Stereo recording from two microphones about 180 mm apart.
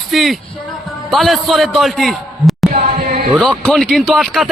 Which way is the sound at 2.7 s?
50° right (ahead or behind).